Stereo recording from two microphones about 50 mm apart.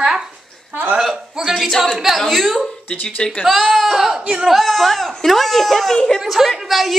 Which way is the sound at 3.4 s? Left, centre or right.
Centre.